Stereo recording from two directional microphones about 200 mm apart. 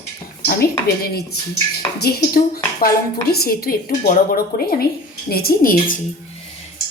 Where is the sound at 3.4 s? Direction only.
50° left (ahead or behind).